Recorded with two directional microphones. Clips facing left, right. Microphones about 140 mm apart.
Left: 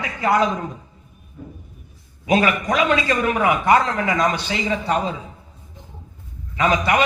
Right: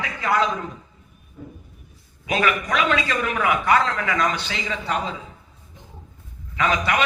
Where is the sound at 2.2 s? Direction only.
25° left (ahead or behind).